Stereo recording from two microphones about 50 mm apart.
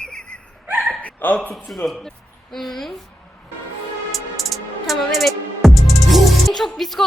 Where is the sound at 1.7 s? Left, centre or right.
Centre.